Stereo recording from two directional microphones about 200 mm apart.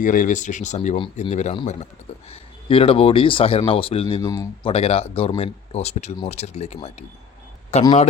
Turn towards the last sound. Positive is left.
turn(degrees=30)  # may be behind; listen again after turning